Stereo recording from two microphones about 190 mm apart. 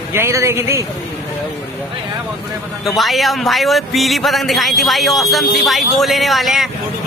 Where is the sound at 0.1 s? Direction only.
15° right (ahead or behind).